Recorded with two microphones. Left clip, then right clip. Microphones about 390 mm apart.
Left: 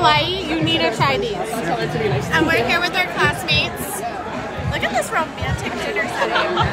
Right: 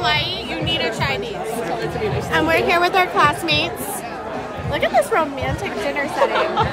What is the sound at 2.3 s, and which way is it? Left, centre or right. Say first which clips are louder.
Speech: right 1 dB; centre.